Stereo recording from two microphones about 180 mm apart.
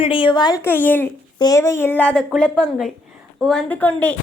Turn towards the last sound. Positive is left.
turn(degrees=10)  # may be behind; listen again after turning